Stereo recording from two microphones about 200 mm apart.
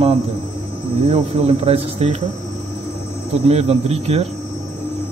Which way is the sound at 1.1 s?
30° right (ahead or behind).